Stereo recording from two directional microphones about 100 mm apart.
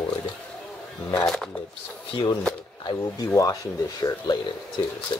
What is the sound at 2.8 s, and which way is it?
Speech, 45° left (ahead or behind).